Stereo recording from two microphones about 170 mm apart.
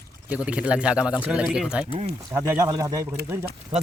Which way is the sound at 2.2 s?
15° right (ahead or behind).